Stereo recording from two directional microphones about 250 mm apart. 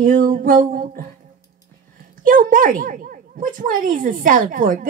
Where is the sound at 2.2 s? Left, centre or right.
Right.